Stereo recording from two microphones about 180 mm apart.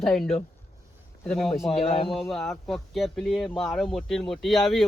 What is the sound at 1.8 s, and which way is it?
Speech, 30° left (ahead or behind).